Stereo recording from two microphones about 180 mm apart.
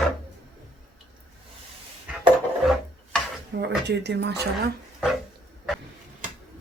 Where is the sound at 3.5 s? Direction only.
70° right (ahead or behind).